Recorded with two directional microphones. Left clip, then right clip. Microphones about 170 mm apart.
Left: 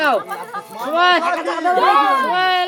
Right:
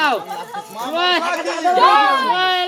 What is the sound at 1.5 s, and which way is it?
Speech, 20° left (ahead or behind).